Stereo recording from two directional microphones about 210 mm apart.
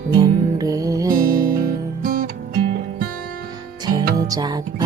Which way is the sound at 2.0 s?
40° right (ahead or behind).